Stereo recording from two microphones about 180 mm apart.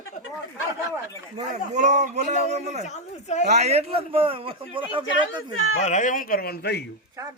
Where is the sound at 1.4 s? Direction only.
40° right (ahead or behind).